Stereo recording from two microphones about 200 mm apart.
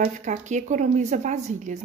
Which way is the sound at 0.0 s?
40° right (ahead or behind).